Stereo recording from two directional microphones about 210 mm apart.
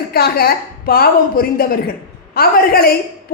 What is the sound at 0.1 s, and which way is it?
A man's voice, 45° left (ahead or behind).